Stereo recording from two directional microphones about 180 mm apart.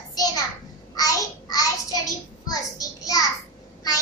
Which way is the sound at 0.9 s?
20° left (ahead or behind).